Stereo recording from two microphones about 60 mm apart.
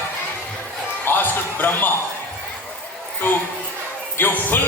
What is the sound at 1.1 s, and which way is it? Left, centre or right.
Speech, left.